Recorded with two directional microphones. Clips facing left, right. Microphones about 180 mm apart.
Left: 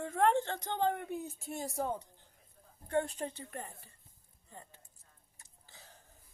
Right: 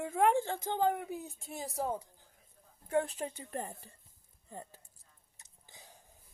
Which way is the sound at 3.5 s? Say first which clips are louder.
Right 5 dB; 35° right (ahead or behind).